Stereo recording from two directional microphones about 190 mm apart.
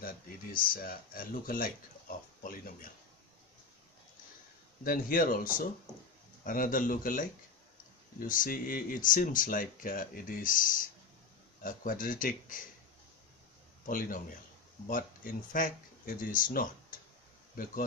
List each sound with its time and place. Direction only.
0.0 s speech: 50° left (ahead or behind)
4.8 s speech: 45° left (ahead or behind)
11.6 s speech: 45° left (ahead or behind)
13.8 s speech: 45° left (ahead or behind)